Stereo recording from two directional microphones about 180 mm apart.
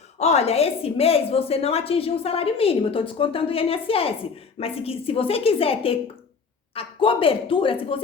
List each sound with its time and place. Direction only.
0.2 s a woman's voice: 35° left (ahead or behind)